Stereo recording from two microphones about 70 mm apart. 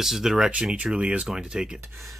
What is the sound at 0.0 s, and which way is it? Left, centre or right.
Speech, centre.